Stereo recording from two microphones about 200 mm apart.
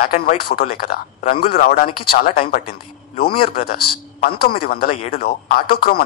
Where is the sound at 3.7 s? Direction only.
50° left (ahead or behind).